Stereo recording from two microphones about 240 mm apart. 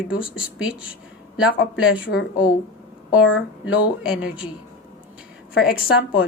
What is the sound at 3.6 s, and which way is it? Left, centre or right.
Speech, centre.